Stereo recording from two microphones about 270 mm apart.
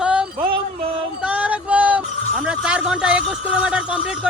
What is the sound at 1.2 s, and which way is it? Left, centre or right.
Jingle bell, centre.